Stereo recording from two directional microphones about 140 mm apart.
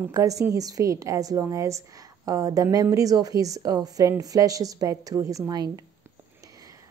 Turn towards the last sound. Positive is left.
turn(degrees=-25)  # may be behind; listen again after turning